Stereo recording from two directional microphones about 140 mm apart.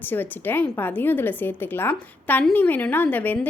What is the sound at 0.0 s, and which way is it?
A woman's voice, 15° left (ahead or behind).